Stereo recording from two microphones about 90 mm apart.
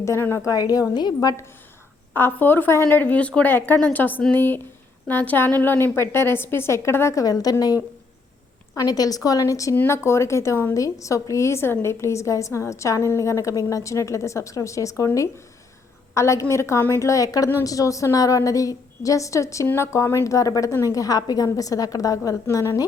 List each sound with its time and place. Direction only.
0.0 s a woman's voice: 30° left (ahead or behind)
0.4 s a woman's voice: 40° left (ahead or behind)
2.1 s speech: 25° left (ahead or behind); by 7.5 s 45° left (ahead or behind)
8.7 s a woman's voice: 45° left (ahead or behind)